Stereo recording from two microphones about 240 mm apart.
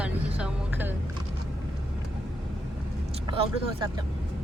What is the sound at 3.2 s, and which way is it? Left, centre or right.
Speech, right.